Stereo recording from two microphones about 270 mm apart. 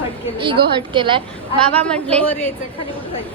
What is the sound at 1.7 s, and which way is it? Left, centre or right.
Speech, centre.